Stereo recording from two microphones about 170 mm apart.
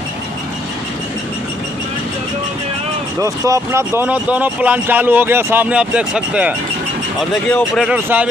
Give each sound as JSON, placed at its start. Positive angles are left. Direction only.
{"t": 3.2, "sound": "speech", "side_deg": -20}